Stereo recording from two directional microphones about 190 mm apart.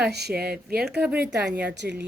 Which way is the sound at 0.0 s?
60° right (ahead or behind).